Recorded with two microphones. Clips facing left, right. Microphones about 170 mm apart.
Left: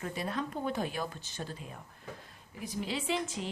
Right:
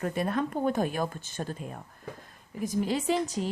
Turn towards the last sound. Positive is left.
turn(degrees=-40)  # may be behind; listen again after turning